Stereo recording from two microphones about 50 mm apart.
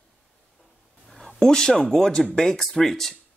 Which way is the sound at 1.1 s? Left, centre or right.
Centre.